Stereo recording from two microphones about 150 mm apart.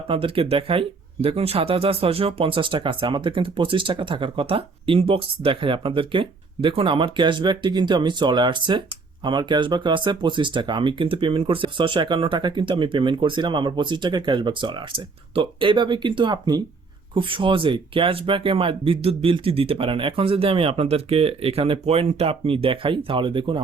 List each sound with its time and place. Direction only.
0.1 s speech: 35° right (ahead or behind)